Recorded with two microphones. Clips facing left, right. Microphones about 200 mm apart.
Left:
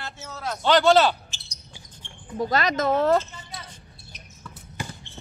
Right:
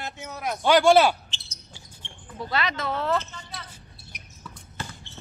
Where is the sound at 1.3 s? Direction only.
15° left (ahead or behind).